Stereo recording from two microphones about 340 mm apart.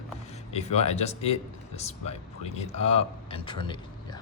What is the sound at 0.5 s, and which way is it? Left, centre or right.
Speech, centre.